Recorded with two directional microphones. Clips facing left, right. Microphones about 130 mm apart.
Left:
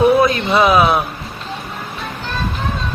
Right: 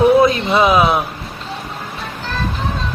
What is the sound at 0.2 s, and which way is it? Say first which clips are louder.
Speech: right 1 dB; 25° right (ahead or behind).